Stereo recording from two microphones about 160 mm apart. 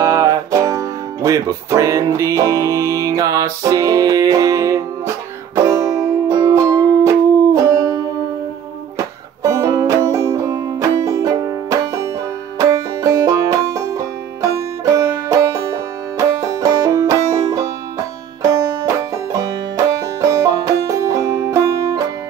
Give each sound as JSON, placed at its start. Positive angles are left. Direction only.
{"t": 0.0, "sound": "speech", "side_deg": -20}
{"t": 5.7, "sound": "music", "side_deg": -20}
{"t": 20.2, "sound": "music", "side_deg": -20}